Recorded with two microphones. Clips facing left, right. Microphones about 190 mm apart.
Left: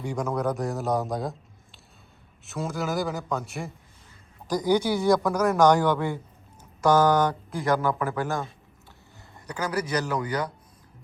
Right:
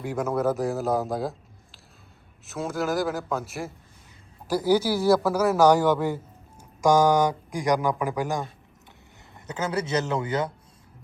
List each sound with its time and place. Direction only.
0.0 s a man's voice: 5° right (ahead or behind); by 10.5 s 25° right (ahead or behind)